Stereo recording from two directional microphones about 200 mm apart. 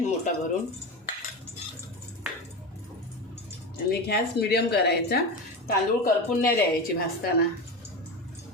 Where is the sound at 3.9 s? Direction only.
55° left (ahead or behind).